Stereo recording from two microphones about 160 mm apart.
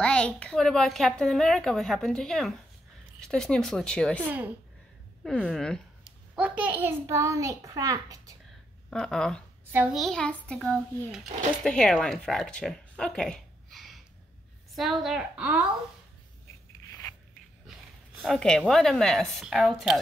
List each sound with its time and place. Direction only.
0.0 s a child's voice: 5° left (ahead or behind)
4.2 s speech: 10° right (ahead or behind)
5.2 s speech: 5° left (ahead or behind)
6.3 s a child's voice: 10° right (ahead or behind)
8.9 s a child's voice: 5° left (ahead or behind)
9.7 s a child's voice: 10° right (ahead or behind)
9.9 s a child's voice: centre (ahead or behind)
17.6 s a sound: centre (ahead or behind)
18.6 s a child's voice: centre (ahead or behind)